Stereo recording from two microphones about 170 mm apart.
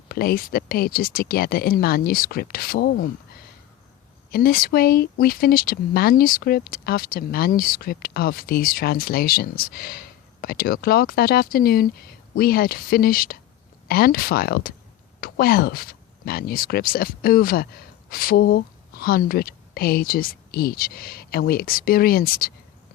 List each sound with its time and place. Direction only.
0.1 s speech: 60° left (ahead or behind); by 3.4 s 80° left
4.3 s speech: 60° left (ahead or behind)